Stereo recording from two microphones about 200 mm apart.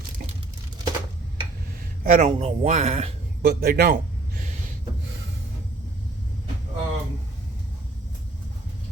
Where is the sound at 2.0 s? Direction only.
40° right (ahead or behind).